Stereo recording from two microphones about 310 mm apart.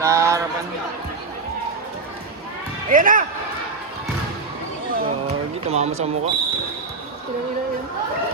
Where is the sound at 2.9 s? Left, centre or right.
Right.